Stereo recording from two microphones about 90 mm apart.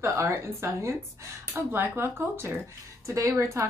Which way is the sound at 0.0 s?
30° right (ahead or behind).